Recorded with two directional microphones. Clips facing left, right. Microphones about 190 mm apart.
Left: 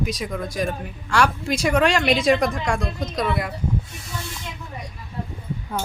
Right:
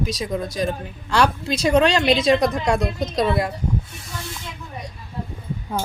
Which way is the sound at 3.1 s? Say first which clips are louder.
Right 4 dB; 30° right (ahead or behind).